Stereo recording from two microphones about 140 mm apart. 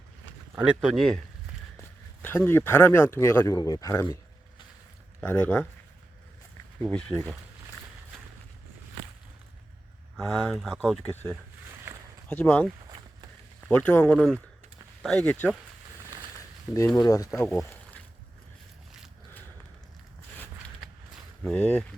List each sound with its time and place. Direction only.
0.5 s speech: 5° right (ahead or behind)
2.2 s speech: 15° left (ahead or behind)
5.2 s speech: 10° left (ahead or behind)
6.8 s speech: 5° left (ahead or behind)
10.2 s speech: centre (ahead or behind)
13.7 s speech: 10° left (ahead or behind)
16.7 s speech: 10° right (ahead or behind)
17.0 s speech: 25° left (ahead or behind)
21.4 s speech: 10° left (ahead or behind)